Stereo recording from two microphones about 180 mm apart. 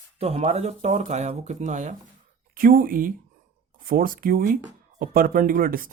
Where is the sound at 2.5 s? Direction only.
50° right (ahead or behind).